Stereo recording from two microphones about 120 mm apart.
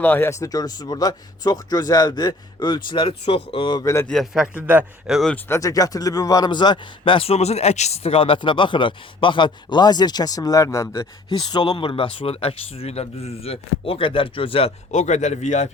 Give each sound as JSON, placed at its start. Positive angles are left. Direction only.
{"t": 0.0, "sound": "a man's voice", "side_deg": 15}
{"t": 4.1, "sound": "a man's voice", "side_deg": 0}
{"t": 4.5, "sound": "speech", "side_deg": -15}
{"t": 5.5, "sound": "a man's voice", "side_deg": 30}
{"t": 11.3, "sound": "speech", "side_deg": 40}
{"t": 14.8, "sound": "a man's voice", "side_deg": 80}